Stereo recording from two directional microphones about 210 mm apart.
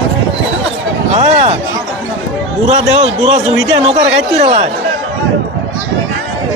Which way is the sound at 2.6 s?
30° right (ahead or behind).